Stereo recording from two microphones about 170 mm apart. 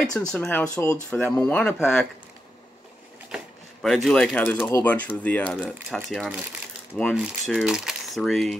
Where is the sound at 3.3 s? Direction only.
Centre (ahead or behind).